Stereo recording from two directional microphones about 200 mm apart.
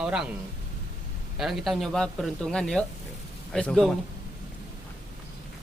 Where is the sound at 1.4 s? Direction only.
Centre (ahead or behind).